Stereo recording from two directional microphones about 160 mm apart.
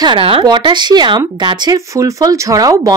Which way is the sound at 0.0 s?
35° right (ahead or behind).